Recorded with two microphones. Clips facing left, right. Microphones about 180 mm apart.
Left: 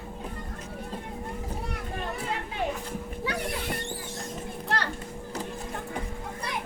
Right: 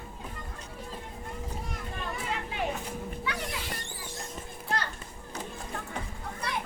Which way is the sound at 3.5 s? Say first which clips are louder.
Left 6 dB; 60° left (ahead or behind).